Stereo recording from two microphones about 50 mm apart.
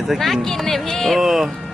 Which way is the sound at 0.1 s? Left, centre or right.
Centre.